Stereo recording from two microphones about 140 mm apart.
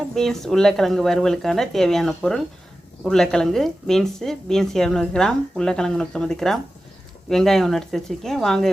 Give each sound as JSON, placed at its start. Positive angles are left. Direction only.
{"t": 0.1, "sound": "a woman's voice", "side_deg": 5}